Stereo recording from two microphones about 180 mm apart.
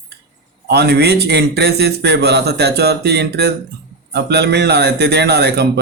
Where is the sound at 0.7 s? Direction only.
65° right (ahead or behind).